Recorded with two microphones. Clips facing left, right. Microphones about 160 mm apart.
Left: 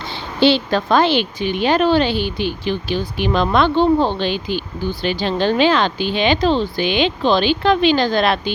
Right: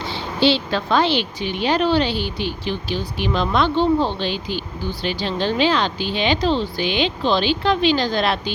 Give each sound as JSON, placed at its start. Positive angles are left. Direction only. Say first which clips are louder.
{"t": 0.3, "sound": "a woman's voice", "louder": "left 4 dB", "side_deg": 55}